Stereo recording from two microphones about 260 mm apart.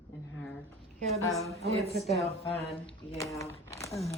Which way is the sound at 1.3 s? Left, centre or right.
Centre.